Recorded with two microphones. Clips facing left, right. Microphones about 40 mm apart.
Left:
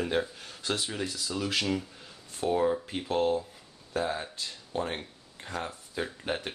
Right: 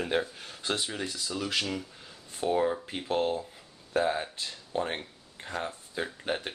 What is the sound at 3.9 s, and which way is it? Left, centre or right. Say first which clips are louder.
Speech: right 3 dB; centre.